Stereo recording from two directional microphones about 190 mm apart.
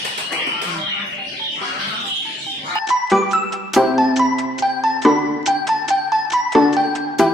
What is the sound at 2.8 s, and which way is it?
Music, centre (ahead or behind).